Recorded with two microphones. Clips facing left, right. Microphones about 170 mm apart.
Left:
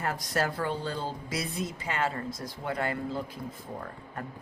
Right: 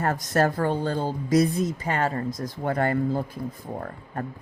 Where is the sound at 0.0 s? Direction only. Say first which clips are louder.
Right 7 dB; 50° right (ahead or behind).